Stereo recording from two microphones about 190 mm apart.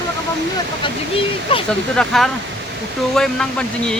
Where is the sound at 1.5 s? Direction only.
30° left (ahead or behind).